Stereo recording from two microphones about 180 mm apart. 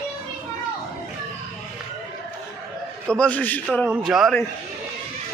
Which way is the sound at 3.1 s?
5° left (ahead or behind).